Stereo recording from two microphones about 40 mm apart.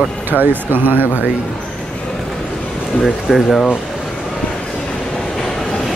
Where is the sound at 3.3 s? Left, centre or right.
Centre.